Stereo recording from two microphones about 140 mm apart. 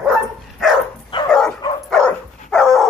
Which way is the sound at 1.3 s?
5° left (ahead or behind).